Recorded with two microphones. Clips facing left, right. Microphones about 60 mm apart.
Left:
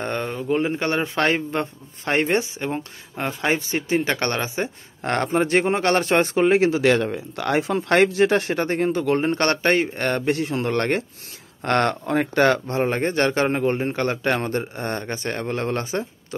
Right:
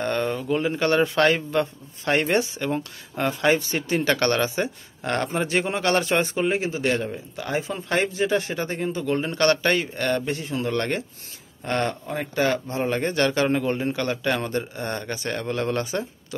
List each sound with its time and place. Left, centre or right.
0.0 s a sound: centre
0.4 s speech: left
5.0 s speech: left
6.6 s a man's voice: left
7.1 s speech: left
10.2 s speech: left
11.6 s speech: left
12.8 s a man's voice: left